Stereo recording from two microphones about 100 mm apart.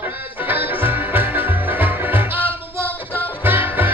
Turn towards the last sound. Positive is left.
turn(degrees=-20)  # may be behind; listen again after turning